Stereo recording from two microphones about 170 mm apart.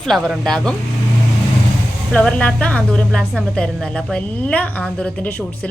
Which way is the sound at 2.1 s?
5° left (ahead or behind).